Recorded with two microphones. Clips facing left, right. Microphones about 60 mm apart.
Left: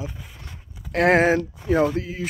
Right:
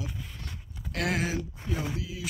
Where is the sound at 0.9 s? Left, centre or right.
Left.